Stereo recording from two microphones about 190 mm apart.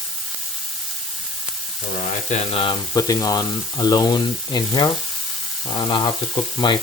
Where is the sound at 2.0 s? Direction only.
40° left (ahead or behind); by 6.7 s 25° left (ahead or behind).